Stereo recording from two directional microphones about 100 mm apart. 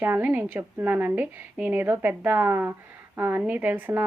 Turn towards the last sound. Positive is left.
turn(degrees=-20)  # may be behind; listen again after turning